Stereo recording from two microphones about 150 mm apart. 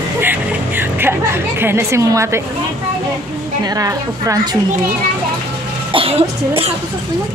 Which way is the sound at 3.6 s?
25° right (ahead or behind).